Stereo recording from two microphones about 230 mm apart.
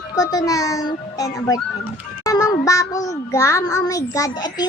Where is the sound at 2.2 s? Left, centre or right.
Centre.